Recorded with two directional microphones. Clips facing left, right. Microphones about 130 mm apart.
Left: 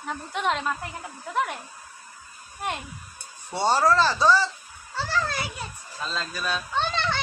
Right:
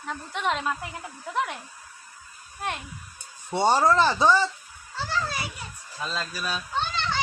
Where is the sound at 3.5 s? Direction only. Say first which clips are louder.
Right 1 dB; 15° right (ahead or behind).